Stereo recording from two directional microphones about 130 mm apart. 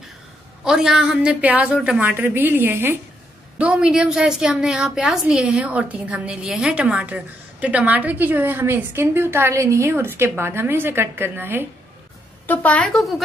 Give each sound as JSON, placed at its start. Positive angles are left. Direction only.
{"t": 0.7, "sound": "a woman's voice", "side_deg": -5}
{"t": 12.4, "sound": "a woman's voice", "side_deg": 10}